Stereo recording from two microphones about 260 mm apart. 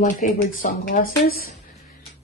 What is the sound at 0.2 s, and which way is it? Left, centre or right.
Speech, left.